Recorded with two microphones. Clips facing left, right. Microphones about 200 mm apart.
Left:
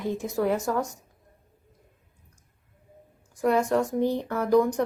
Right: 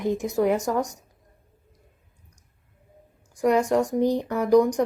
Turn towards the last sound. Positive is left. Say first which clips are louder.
# right 3 dB
turn(degrees=-15)  # may be behind; listen again after turning